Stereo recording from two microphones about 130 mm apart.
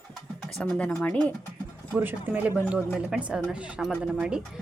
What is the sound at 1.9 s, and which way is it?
Speech, 15° right (ahead or behind).